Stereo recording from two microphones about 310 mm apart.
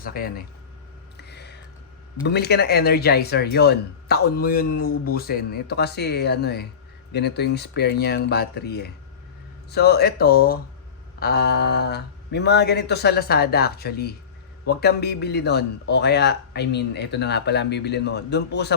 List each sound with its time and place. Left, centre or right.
0.0 s speech: left
1.1 s a sound: left
2.2 s speech: left